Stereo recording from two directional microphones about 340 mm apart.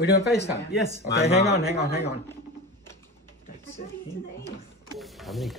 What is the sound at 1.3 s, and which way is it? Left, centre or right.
Speech, left.